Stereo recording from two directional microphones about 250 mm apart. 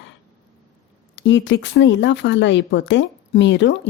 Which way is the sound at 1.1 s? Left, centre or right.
Left.